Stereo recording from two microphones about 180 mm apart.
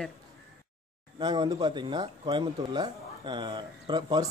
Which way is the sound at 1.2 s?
25° right (ahead or behind).